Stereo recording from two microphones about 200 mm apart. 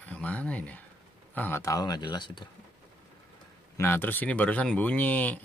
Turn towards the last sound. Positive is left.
turn(degrees=10)  # may be behind; listen again after turning